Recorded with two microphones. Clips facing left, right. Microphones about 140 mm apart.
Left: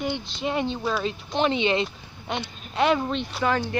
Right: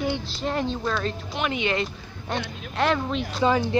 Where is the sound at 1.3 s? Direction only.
30° left (ahead or behind).